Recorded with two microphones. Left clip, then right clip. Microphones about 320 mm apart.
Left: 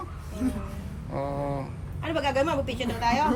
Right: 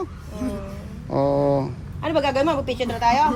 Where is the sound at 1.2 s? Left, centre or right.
Left.